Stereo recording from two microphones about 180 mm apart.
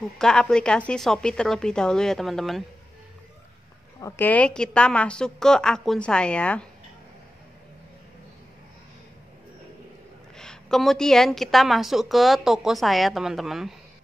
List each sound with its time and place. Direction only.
0.2 s a woman's voice: 5° left (ahead or behind)
4.0 s a woman's voice: 10° left (ahead or behind)
10.3 s a woman's voice: 5° left (ahead or behind)